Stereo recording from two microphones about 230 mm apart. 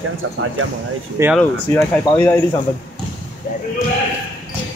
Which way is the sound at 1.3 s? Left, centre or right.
Centre.